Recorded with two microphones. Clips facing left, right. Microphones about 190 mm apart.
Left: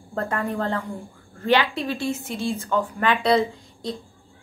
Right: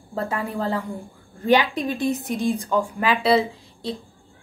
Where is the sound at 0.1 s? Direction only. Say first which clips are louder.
Left 1 dB; 5° right (ahead or behind).